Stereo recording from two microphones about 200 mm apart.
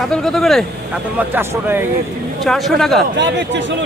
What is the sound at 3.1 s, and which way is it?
Speech, 65° right (ahead or behind).